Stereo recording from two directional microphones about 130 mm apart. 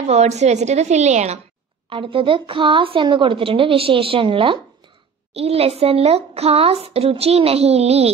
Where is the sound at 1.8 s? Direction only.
45° right (ahead or behind).